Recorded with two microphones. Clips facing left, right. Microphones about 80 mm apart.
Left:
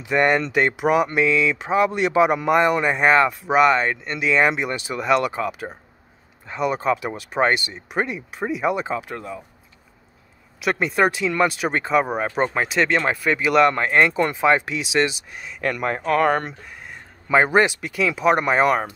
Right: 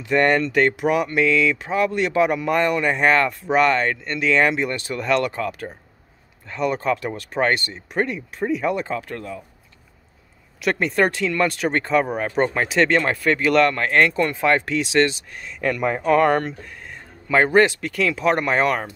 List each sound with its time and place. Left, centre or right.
0.0 s speech: centre
10.6 s speech: centre